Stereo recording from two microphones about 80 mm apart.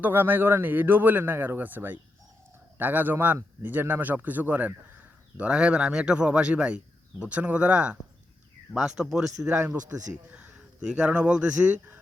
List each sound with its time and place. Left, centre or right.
0.0 s speech: right; by 9.3 s centre
10.2 s speech: centre